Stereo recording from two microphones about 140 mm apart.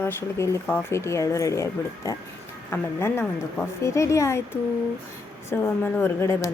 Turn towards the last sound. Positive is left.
turn(degrees=20)  # may be behind; listen again after turning